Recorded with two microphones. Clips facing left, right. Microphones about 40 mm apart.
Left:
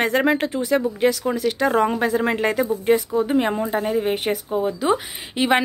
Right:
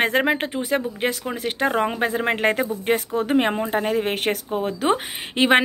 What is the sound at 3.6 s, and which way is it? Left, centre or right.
Speech, right.